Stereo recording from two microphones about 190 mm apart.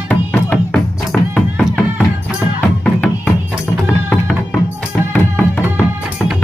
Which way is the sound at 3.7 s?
5° left (ahead or behind).